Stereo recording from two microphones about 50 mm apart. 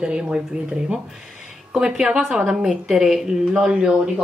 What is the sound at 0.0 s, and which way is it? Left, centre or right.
Speech, centre.